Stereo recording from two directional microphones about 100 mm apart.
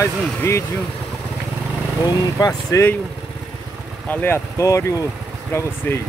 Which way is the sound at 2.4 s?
30° left (ahead or behind).